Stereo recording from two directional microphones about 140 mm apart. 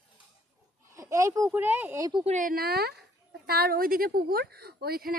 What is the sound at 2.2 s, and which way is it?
A woman's voice, 70° right (ahead or behind).